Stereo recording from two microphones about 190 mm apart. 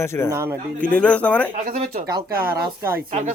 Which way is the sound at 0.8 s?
5° left (ahead or behind).